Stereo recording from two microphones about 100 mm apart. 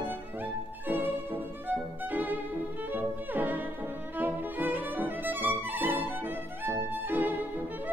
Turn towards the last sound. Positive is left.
turn(degrees=-20)  # may be behind; listen again after turning